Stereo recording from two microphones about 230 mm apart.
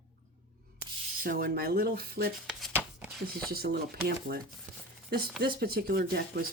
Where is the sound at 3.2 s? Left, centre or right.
Right.